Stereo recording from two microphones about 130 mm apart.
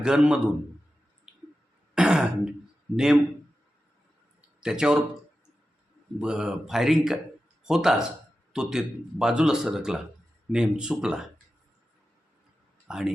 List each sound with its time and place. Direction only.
0.0 s speech: 5° right (ahead or behind)
2.0 s throat clearing: 5° right (ahead or behind)
2.9 s speech: 5° right (ahead or behind)
4.4 s a sound: 5° right (ahead or behind)
6.1 s speech: 5° right (ahead or behind)
12.9 s speech: 5° right (ahead or behind)